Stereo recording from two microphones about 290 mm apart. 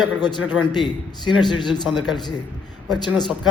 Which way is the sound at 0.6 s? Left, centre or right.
Centre.